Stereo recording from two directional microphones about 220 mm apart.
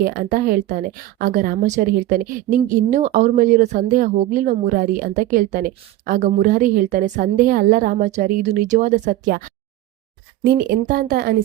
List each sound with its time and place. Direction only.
0.0 s a woman's voice: 40° right (ahead or behind)
10.4 s speech: 45° right (ahead or behind)